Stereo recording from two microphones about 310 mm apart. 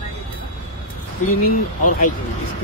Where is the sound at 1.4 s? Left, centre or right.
Left.